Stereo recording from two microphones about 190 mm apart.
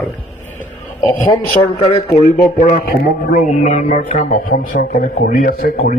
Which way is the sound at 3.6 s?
40° left (ahead or behind).